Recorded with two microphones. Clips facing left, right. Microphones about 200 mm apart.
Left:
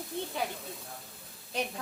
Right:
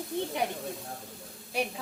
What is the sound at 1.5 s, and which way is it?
Speech, 10° right (ahead or behind).